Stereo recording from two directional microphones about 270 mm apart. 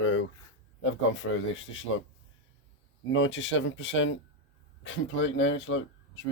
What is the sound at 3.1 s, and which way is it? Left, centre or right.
Speech, left.